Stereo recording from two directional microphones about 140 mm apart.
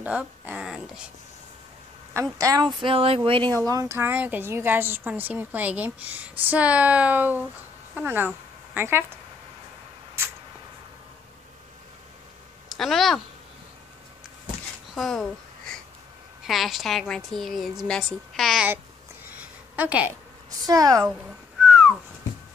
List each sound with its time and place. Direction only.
0.0 s speech: 10° right (ahead or behind)
2.3 s speech: 25° right (ahead or behind)
3.5 s a woman's voice: 25° right (ahead or behind)
12.6 s speech: centre (ahead or behind)
15.0 s a sound: 5° left (ahead or behind)
16.4 s a woman's voice: centre (ahead or behind)
19.7 s a woman's voice: 10° right (ahead or behind)
20.6 s a woman's voice: 25° right (ahead or behind)
21.1 s whistling: 5° right (ahead or behind)